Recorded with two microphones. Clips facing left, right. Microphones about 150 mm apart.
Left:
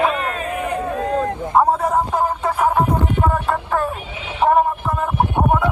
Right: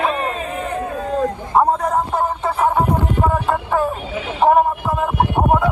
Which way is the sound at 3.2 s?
Centre (ahead or behind).